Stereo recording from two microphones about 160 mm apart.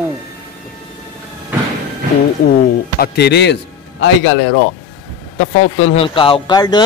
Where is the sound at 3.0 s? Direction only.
90° left.